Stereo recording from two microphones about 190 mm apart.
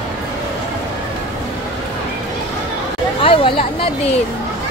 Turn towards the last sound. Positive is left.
turn(degrees=30)  # may be behind; listen again after turning